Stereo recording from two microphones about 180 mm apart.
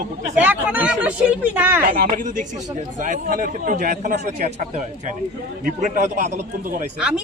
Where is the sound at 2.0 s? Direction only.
50° right (ahead or behind).